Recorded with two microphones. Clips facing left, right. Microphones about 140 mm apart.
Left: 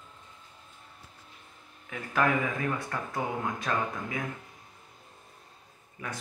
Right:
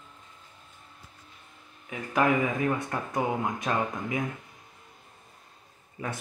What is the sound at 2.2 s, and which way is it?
Speech, 20° right (ahead or behind).